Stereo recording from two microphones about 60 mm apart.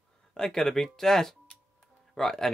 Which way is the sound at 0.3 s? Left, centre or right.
Centre.